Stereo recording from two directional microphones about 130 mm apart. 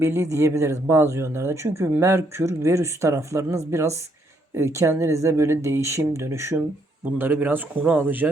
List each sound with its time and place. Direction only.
0.0 s speech: 20° right (ahead or behind)